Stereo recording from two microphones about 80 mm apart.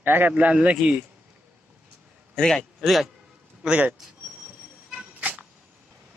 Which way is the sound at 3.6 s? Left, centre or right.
Centre.